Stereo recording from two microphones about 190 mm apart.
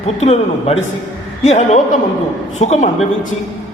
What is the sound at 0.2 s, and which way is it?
A man's voice, 35° left (ahead or behind).